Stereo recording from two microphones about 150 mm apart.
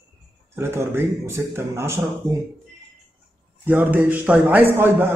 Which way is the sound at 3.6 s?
15° right (ahead or behind).